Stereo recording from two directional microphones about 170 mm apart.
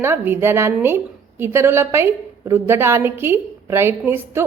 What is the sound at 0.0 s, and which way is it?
A woman's voice, 10° right (ahead or behind).